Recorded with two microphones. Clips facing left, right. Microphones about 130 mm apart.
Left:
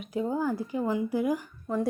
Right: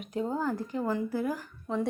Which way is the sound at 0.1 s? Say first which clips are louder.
Left 2 dB; 10° left (ahead or behind).